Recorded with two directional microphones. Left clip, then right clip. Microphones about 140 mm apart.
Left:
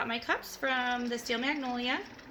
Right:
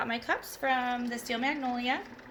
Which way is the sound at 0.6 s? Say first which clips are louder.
Right 2 dB; 30° left (ahead or behind).